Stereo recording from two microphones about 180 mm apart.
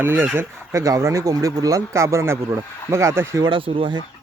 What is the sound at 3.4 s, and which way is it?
Speech, 30° right (ahead or behind).